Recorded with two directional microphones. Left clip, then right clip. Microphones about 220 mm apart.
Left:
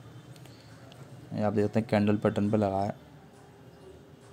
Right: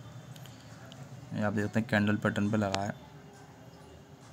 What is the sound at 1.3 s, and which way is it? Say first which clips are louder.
A man's voice: left 5 dB; 15° left (ahead or behind).